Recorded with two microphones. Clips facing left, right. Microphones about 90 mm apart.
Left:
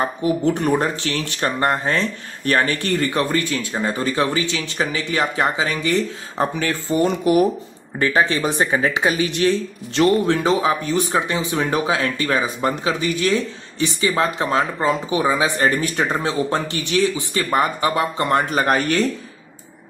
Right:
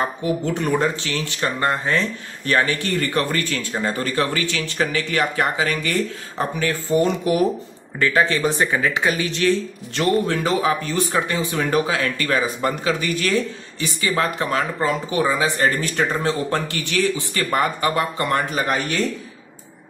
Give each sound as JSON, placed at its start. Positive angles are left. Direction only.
{"t": 0.5, "sound": "speech", "side_deg": 55}
{"t": 3.0, "sound": "speech", "side_deg": 20}
{"t": 18.5, "sound": "speech", "side_deg": 50}